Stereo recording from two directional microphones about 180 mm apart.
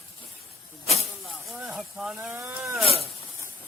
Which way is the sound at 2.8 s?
35° left (ahead or behind).